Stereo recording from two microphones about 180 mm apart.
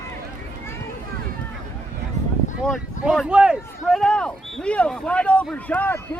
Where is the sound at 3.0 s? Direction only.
Centre (ahead or behind).